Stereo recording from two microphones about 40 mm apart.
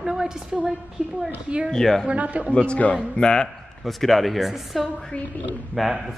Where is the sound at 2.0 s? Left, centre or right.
Right.